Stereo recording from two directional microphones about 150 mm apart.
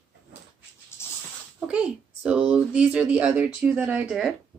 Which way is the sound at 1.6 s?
5° right (ahead or behind).